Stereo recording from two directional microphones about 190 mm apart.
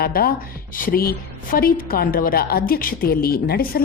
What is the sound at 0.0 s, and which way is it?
A woman's voice, 50° left (ahead or behind).